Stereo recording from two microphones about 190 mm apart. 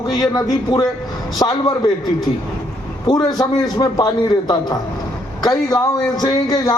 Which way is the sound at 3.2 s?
20° left (ahead or behind).